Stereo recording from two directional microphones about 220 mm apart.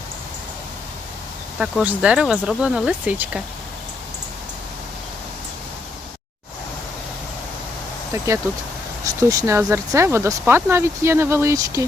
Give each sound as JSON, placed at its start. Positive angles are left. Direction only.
{"t": 1.5, "sound": "speech", "side_deg": 0}
{"t": 9.0, "sound": "speech", "side_deg": -15}